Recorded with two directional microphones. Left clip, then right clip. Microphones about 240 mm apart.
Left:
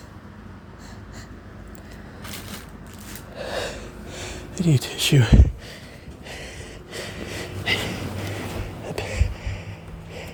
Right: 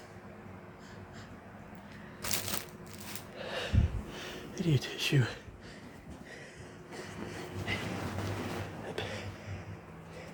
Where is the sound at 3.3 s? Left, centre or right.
Left.